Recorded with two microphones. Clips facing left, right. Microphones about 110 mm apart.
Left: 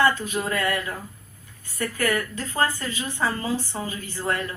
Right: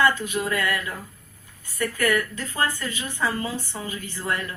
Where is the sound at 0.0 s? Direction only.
35° left (ahead or behind).